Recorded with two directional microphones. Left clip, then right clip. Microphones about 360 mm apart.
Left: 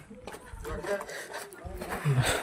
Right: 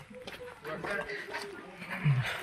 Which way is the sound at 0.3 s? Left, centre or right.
Centre.